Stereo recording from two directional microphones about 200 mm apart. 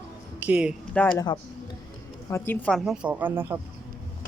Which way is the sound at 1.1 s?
20° left (ahead or behind).